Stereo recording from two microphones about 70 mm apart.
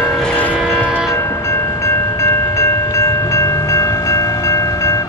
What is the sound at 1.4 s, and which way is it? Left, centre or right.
Train, left.